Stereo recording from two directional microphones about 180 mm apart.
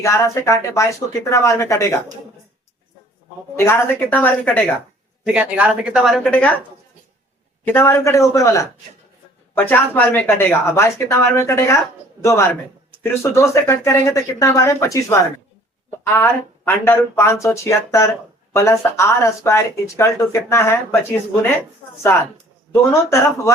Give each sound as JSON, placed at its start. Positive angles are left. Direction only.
{"t": 0.0, "sound": "speech", "side_deg": 15}
{"t": 3.6, "sound": "speech", "side_deg": 10}
{"t": 5.2, "sound": "speech", "side_deg": -5}
{"t": 7.7, "sound": "speech", "side_deg": 15}